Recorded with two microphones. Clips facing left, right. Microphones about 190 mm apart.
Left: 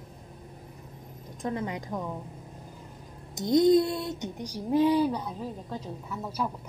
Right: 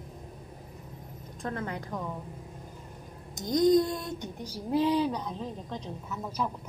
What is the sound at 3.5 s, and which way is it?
Speech, 25° left (ahead or behind).